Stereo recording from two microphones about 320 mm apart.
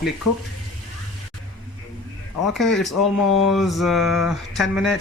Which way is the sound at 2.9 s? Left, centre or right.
Left.